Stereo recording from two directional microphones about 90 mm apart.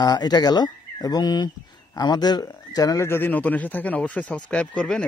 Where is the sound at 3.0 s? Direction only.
25° left (ahead or behind); by 5.0 s 10° left (ahead or behind).